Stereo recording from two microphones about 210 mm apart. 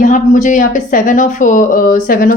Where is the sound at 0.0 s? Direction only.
35° left (ahead or behind).